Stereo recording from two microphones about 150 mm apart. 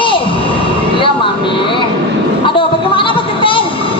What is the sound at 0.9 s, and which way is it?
Vehicle, 35° left (ahead or behind).